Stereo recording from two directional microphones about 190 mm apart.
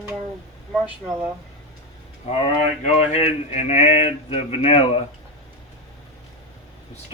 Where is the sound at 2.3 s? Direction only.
35° left (ahead or behind).